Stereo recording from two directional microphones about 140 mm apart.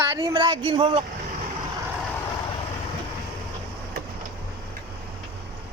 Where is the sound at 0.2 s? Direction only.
30° right (ahead or behind).